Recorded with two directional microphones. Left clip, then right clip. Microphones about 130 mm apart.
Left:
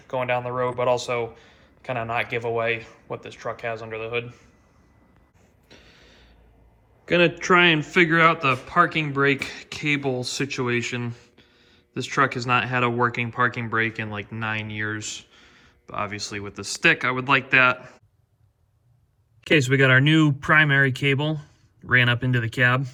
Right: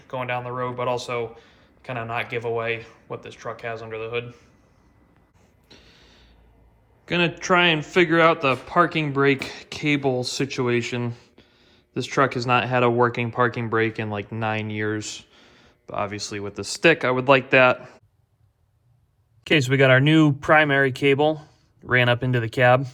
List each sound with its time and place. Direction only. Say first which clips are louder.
0.0 s speech: left 3 dB; 15° right (ahead or behind)
5.6 s a sound: even; 20° right (ahead or behind)
7.0 s a man's voice: left 3 dB; 25° right (ahead or behind); by 17.7 s 40° right (ahead or behind)
19.5 s speech: right 1 dB; 55° right (ahead or behind)